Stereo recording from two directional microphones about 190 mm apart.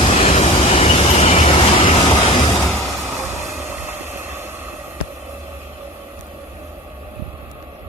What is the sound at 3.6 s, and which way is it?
Vehicle, 10° right (ahead or behind).